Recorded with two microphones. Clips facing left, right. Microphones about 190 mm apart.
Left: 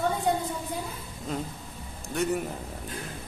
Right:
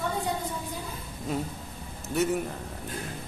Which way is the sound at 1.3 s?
10° right (ahead or behind).